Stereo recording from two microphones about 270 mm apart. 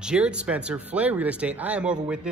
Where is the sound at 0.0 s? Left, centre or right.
Centre.